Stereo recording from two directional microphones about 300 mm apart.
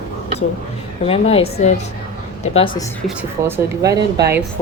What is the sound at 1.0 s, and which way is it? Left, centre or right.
Speech, centre.